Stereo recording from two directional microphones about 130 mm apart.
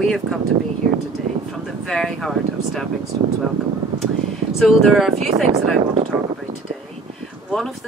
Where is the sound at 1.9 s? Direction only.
Centre (ahead or behind).